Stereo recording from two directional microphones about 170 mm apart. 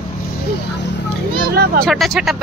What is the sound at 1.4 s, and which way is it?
Speech, 60° right (ahead or behind).